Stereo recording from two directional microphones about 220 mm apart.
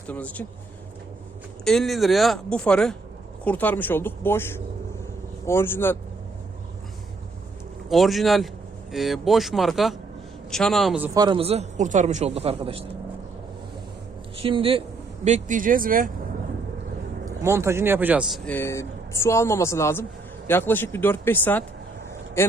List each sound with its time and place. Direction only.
0.1 s speech: 5° left (ahead or behind)
1.6 s speech: centre (ahead or behind)
7.9 s speech: centre (ahead or behind)
11.2 s speech: 25° right (ahead or behind)
14.3 s a man's voice: 25° right (ahead or behind)
17.4 s speech: 10° right (ahead or behind)
18.4 s speech: 10° left (ahead or behind)